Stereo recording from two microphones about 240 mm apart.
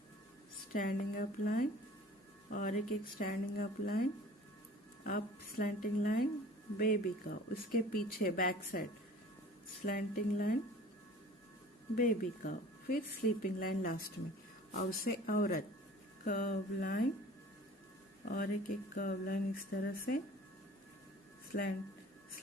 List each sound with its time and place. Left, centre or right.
0.7 s a woman's voice: left
5.0 s a woman's voice: left
11.9 s a woman's voice: left
18.3 s a woman's voice: left
21.5 s a woman's voice: left